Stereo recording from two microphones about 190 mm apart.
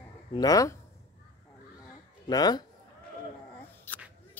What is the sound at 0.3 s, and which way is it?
Speech, 20° left (ahead or behind).